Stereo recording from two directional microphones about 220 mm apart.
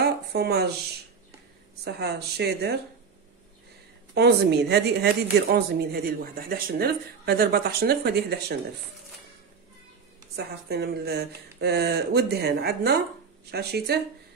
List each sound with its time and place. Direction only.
0.0 s a sound: 45° right (ahead or behind)
1.9 s speech: 45° right (ahead or behind)
4.1 s speech: 50° right (ahead or behind)
10.3 s speech: 45° right (ahead or behind)